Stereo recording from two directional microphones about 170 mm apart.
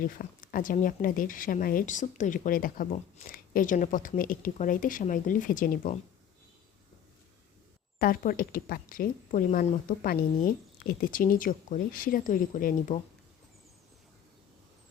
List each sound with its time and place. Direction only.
0.2 s a woman's voice: 55° left (ahead or behind)
7.9 s speech: 55° left (ahead or behind)